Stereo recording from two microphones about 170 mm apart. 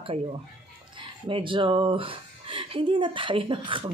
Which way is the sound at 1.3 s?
30° right (ahead or behind).